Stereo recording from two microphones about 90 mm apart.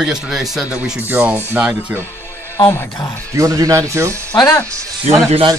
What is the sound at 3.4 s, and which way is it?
Speech, 40° right (ahead or behind).